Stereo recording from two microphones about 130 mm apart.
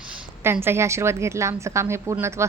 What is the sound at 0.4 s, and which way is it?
Speech, 20° right (ahead or behind).